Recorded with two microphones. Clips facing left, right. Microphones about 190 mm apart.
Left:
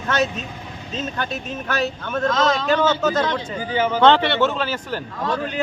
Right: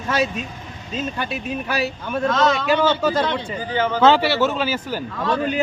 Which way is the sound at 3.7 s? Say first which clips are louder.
Left 1 dB; 10° left (ahead or behind).